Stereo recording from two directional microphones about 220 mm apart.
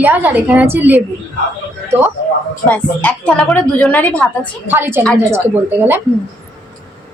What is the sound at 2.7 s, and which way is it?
A woman's voice, 5° left (ahead or behind).